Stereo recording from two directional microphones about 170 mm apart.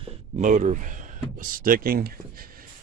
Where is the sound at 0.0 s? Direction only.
40° right (ahead or behind).